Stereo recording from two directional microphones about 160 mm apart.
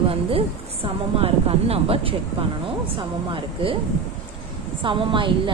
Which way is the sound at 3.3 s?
35° right (ahead or behind).